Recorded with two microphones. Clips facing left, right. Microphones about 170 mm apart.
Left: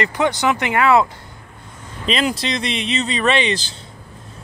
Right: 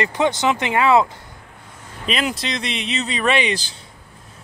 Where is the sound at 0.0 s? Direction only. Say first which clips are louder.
Even; 20° right (ahead or behind).